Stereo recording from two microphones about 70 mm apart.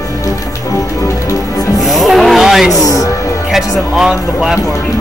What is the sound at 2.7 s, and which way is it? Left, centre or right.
Speech, left.